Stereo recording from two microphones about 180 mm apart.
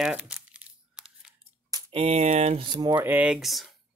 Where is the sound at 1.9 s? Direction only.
35° right (ahead or behind).